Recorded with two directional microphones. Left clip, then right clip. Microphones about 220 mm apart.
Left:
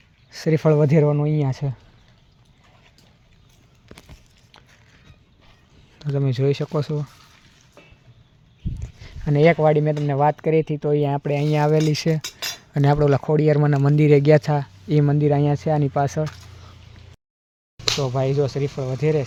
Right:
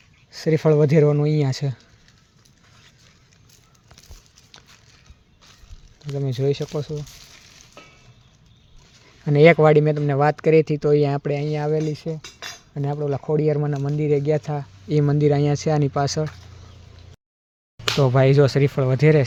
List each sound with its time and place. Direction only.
0.3 s speech: 10° left (ahead or behind)
6.1 s speech: 15° left (ahead or behind)
9.2 s speech: centre (ahead or behind); by 11.8 s 20° left (ahead or behind)
11.8 s cutlery: 35° left (ahead or behind)
12.2 s cutlery: 55° left (ahead or behind)
12.7 s speech: 30° left (ahead or behind); by 16.2 s 5° left (ahead or behind)
17.9 s speech: 30° right (ahead or behind)